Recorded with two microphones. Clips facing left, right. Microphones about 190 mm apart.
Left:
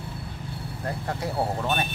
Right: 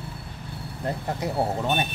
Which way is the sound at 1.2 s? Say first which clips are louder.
Right 1 dB; 20° right (ahead or behind).